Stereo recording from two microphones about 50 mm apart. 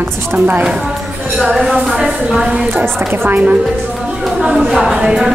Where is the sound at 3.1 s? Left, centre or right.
Right.